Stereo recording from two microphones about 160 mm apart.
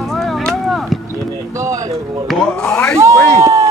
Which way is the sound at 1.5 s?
20° right (ahead or behind).